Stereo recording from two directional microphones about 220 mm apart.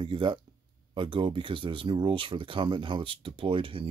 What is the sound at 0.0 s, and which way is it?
Speech, 20° right (ahead or behind).